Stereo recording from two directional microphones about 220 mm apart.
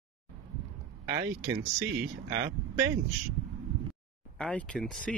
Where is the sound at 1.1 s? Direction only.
15° right (ahead or behind).